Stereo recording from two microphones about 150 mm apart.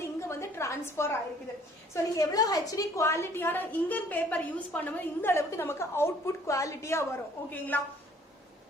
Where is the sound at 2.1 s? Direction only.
25° left (ahead or behind).